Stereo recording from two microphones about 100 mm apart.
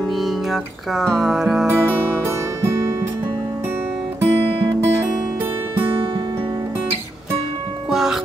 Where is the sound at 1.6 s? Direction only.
20° right (ahead or behind).